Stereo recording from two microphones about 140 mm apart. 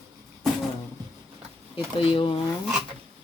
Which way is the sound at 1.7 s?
40° left (ahead or behind).